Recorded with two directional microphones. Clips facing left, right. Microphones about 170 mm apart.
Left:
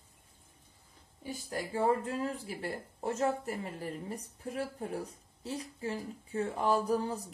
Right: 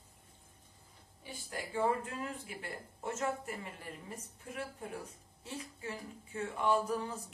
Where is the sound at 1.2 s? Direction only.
40° left (ahead or behind).